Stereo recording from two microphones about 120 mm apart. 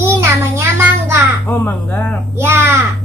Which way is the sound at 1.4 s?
15° left (ahead or behind).